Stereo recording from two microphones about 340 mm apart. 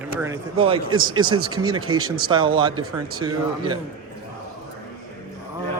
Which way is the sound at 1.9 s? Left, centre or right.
Right.